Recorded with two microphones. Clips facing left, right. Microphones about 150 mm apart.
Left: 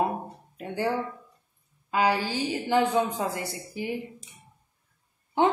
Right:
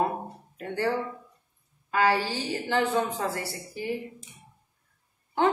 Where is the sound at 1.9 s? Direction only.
15° left (ahead or behind).